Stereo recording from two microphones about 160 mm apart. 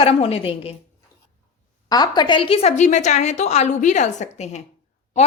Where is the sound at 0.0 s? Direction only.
40° left (ahead or behind).